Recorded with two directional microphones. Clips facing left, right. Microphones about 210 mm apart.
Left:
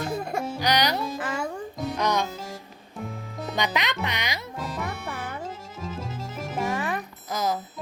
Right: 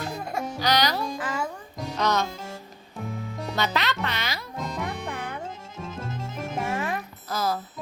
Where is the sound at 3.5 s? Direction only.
15° left (ahead or behind).